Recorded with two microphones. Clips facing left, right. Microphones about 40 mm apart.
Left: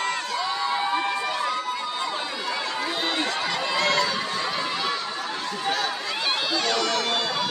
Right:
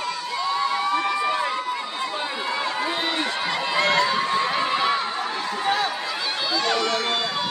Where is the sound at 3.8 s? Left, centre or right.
Right.